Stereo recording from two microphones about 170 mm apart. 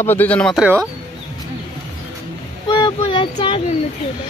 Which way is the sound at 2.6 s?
30° left (ahead or behind).